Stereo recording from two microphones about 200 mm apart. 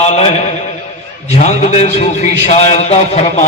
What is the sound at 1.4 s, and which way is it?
A man's voice, 35° left (ahead or behind).